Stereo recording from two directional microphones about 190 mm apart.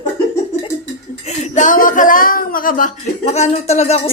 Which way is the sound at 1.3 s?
40° left (ahead or behind).